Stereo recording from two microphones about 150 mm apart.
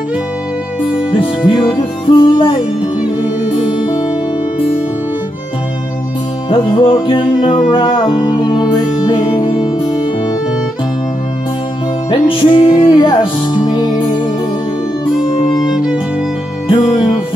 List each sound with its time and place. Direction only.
1.1 s music: 30° left (ahead or behind)
3.5 s music: 35° left (ahead or behind)
6.5 s music: 35° left (ahead or behind)
12.1 s music: 35° left (ahead or behind)
15.6 s music: 5° right (ahead or behind)